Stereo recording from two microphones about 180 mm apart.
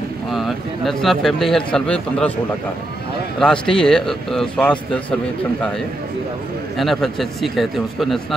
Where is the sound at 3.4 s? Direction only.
5° left (ahead or behind).